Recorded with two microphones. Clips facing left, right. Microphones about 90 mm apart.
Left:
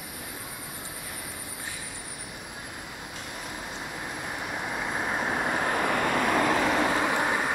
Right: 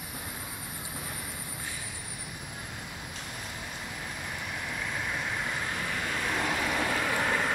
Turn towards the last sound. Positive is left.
turn(degrees=20)  # may be behind; listen again after turning